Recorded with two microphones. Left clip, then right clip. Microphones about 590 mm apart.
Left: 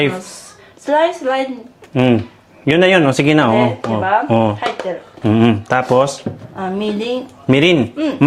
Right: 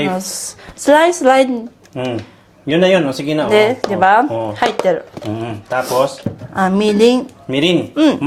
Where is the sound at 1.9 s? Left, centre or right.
Left.